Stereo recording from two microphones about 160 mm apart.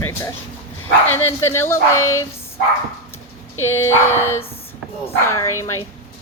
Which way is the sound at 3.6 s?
15° left (ahead or behind).